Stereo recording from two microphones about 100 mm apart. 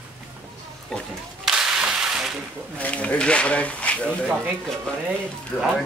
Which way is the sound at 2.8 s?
15° left (ahead or behind).